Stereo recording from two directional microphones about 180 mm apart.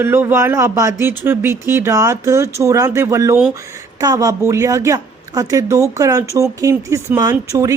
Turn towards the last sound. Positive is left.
turn(degrees=-20)  # may be behind; listen again after turning